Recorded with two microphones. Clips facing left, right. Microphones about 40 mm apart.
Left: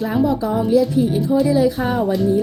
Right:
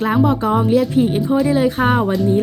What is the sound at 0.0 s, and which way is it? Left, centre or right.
A woman's voice, right.